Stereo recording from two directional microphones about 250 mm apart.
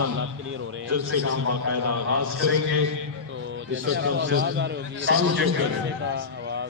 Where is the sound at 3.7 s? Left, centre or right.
Right.